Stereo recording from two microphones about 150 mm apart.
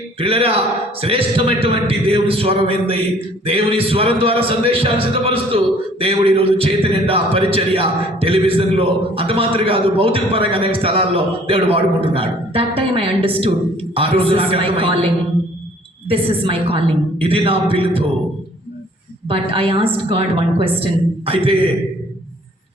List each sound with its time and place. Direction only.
0.2 s a man's voice: 40° right (ahead or behind)
19.3 s a man's voice: 35° right (ahead or behind)